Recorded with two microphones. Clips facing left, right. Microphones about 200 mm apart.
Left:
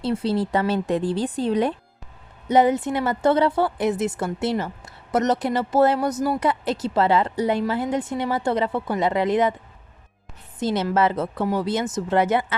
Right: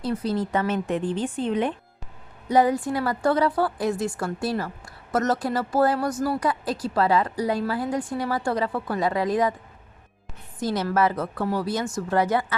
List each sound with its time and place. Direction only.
0.0 s speech: 30° left (ahead or behind)
2.5 s speech: 20° left (ahead or behind)
10.6 s speech: 25° left (ahead or behind)